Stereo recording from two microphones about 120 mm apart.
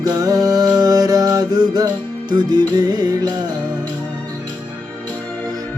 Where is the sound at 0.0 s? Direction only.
30° right (ahead or behind).